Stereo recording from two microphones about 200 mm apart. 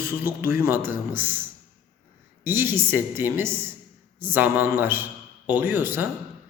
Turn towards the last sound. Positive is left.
turn(degrees=-10)  # may be behind; listen again after turning